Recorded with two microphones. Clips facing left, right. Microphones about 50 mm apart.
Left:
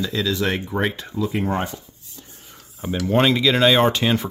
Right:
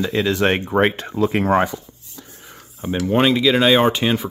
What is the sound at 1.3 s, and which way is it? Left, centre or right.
Speech, right.